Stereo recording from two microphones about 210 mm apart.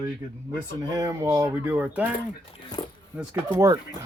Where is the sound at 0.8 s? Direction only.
15° right (ahead or behind).